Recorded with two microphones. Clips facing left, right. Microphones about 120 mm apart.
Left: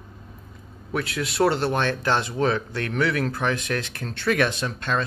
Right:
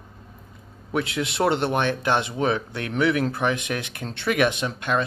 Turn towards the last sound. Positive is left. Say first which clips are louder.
# right 2 dB
turn(degrees=-15)  # may be behind; listen again after turning